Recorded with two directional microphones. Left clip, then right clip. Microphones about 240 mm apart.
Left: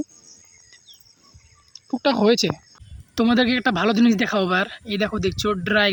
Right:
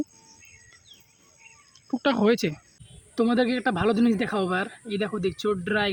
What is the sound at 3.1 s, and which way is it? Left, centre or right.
Speech, left.